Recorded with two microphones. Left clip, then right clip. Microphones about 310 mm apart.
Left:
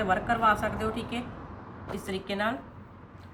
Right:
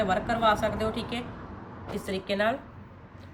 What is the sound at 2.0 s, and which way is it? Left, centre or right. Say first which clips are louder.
Speech: right 3 dB; centre.